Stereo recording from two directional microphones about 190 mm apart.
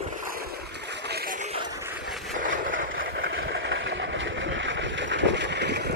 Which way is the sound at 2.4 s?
45° right (ahead or behind).